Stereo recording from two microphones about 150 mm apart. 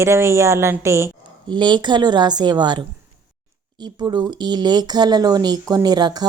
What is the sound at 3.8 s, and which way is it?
A woman's voice, 30° right (ahead or behind).